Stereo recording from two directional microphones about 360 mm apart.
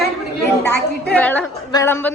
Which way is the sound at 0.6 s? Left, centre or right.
Left.